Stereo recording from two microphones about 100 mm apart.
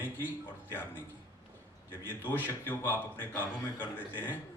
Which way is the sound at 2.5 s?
25° left (ahead or behind).